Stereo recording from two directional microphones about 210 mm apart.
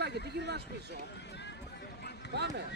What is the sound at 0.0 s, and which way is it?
Speech, 50° right (ahead or behind).